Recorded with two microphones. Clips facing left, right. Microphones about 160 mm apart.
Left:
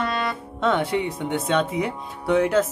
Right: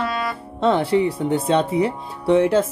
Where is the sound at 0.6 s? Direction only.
30° right (ahead or behind).